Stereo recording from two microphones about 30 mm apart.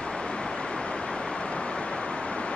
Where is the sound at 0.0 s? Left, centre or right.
Left.